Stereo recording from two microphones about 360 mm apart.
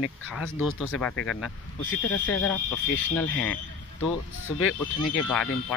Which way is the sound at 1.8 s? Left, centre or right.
Left.